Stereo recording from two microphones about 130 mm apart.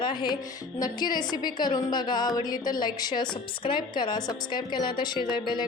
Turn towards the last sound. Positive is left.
turn(degrees=35)  # may be behind; listen again after turning